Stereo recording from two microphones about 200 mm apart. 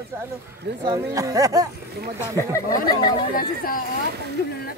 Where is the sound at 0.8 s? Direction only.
20° right (ahead or behind).